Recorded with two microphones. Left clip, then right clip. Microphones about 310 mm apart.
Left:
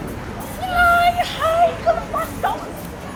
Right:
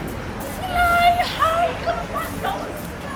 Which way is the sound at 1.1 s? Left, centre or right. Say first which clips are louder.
Even; left.